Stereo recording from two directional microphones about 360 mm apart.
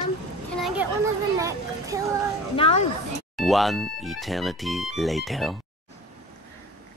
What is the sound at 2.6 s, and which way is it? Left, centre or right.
Speech, centre.